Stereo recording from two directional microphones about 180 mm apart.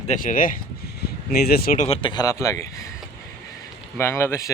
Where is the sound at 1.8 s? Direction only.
30° left (ahead or behind); by 2.6 s 15° left (ahead or behind).